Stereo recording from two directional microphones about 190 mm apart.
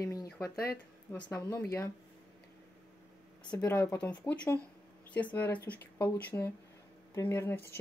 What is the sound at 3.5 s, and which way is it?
Speech, 10° left (ahead or behind).